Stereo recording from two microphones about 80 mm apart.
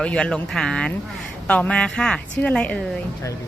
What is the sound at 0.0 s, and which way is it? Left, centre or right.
Speech, centre.